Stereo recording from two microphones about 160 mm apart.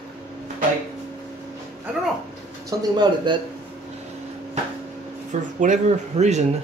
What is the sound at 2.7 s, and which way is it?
Speech, 25° right (ahead or behind).